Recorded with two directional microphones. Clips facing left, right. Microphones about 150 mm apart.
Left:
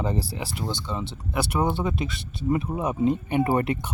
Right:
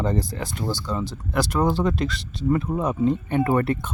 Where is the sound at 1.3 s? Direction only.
10° left (ahead or behind).